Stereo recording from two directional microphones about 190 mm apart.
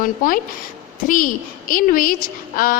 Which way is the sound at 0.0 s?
45° left (ahead or behind).